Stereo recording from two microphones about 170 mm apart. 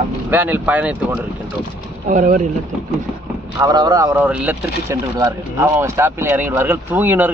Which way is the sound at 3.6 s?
20° right (ahead or behind).